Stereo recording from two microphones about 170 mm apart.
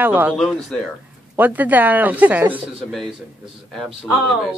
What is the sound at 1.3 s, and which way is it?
Speech, 10° right (ahead or behind).